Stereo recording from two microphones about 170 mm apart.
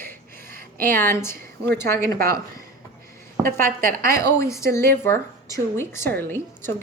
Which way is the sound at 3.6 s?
60° right (ahead or behind).